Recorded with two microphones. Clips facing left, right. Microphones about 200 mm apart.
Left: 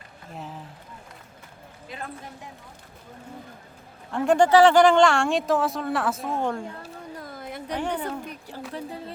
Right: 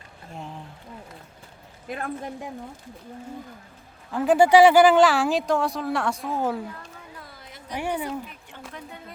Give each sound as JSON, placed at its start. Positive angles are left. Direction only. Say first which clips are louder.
{"t": 0.3, "sound": "speech", "louder": "even", "side_deg": 0}
{"t": 4.1, "sound": "speech", "louder": "right 1 dB", "side_deg": -5}
{"t": 6.7, "sound": "a sound", "louder": "left 5 dB", "side_deg": 45}
{"t": 7.8, "sound": "speech", "louder": "right 2 dB", "side_deg": -10}
{"t": 8.2, "sound": "speech", "louder": "left 5 dB", "side_deg": 40}